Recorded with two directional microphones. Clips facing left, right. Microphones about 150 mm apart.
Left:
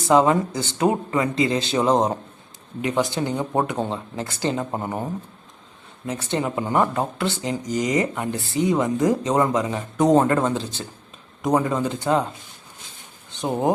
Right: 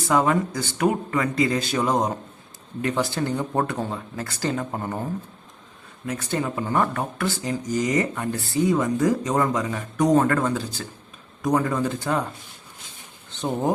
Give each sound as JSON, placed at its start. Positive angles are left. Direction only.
{"t": 0.1, "sound": "speech", "side_deg": 25}
{"t": 6.1, "sound": "speech", "side_deg": 25}
{"t": 13.3, "sound": "speech", "side_deg": 15}